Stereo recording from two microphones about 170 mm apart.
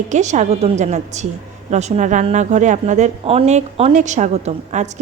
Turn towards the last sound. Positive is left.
turn(degrees=-45)  # may be behind; listen again after turning